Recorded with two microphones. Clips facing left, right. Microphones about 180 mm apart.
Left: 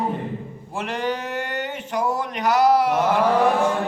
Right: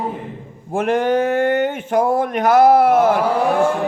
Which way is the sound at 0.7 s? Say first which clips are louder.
Right 9 dB; 50° right (ahead or behind).